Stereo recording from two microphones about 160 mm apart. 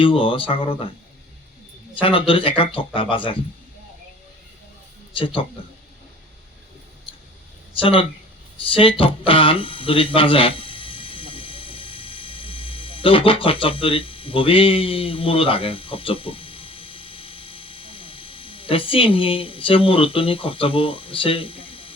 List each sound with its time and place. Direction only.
0.0 s speech: 35° left (ahead or behind)
2.0 s speech: 35° left (ahead or behind)
5.1 s speech: 35° left (ahead or behind)
7.8 s speech: 35° left (ahead or behind)
8.7 s a sound: 35° left (ahead or behind)